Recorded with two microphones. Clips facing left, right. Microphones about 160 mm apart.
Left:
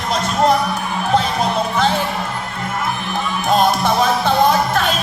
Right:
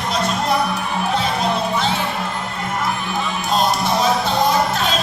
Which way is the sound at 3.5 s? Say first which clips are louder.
Left 4 dB; 55° left (ahead or behind).